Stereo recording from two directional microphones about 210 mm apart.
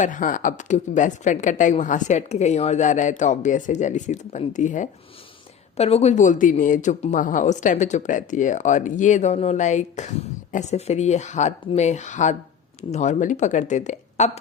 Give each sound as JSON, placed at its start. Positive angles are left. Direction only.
{"t": 0.0, "sound": "a woman's voice", "side_deg": 40}